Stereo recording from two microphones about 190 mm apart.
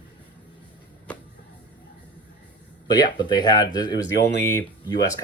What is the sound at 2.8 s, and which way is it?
Speech, 20° left (ahead or behind).